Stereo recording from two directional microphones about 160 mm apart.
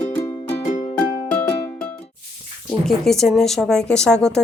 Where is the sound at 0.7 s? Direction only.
45° left (ahead or behind).